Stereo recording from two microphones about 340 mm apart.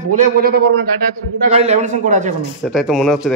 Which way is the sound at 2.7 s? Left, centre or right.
Centre.